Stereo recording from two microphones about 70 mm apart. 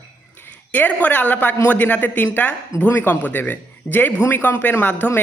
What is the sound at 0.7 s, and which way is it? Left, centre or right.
Speech, left.